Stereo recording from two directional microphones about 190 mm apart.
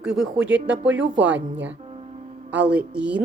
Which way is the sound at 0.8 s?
70° right (ahead or behind).